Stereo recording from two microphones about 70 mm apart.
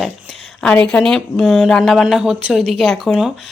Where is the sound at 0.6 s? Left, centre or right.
Centre.